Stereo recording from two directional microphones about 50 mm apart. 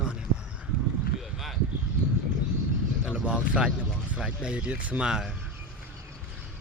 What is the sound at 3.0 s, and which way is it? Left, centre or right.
Speech, centre.